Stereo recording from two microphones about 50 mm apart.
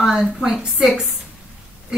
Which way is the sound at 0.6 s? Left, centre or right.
Centre.